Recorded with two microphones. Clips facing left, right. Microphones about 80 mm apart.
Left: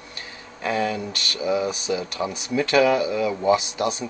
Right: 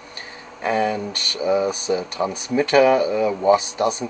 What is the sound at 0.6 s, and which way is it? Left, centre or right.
Speech, centre.